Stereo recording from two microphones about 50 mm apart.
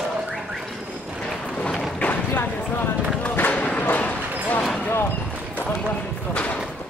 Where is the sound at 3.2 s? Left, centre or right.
Left.